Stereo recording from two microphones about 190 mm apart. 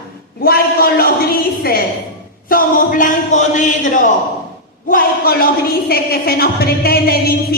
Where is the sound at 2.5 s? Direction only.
45° left (ahead or behind).